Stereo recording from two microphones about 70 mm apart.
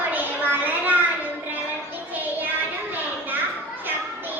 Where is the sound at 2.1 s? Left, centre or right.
Right.